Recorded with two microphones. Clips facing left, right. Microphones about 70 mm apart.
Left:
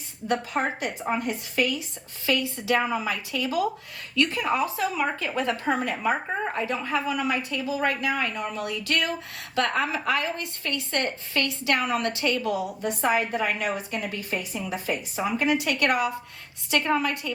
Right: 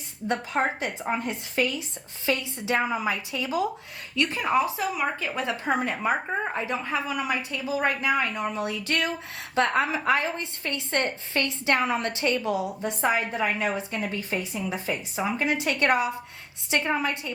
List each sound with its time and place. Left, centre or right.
0.3 s a woman's voice: right